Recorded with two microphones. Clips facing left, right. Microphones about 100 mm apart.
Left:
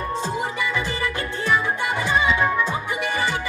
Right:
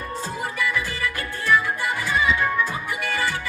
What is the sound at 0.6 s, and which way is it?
Music, 20° left (ahead or behind).